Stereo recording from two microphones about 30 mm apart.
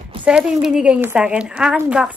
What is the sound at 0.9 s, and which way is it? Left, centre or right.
Speech, right.